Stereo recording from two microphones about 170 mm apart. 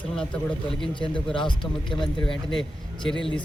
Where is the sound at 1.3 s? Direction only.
30° left (ahead or behind).